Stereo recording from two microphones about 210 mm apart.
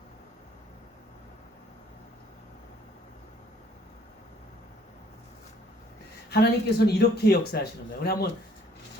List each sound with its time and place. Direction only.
6.3 s speech: 50° left (ahead or behind)